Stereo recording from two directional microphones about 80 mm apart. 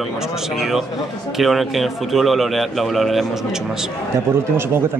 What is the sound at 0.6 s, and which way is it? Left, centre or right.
Speech, centre.